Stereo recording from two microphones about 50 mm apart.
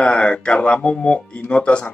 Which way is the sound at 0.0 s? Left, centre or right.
Left.